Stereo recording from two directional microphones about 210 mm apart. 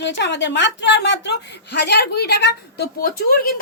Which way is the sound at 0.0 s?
55° left (ahead or behind).